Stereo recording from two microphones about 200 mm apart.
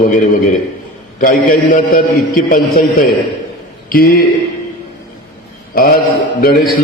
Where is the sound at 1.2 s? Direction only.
45° left (ahead or behind).